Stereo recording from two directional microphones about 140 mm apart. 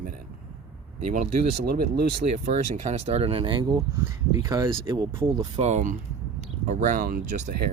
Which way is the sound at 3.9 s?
20° right (ahead or behind).